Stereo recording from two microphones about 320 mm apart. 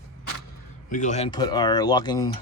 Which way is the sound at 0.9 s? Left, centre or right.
Left.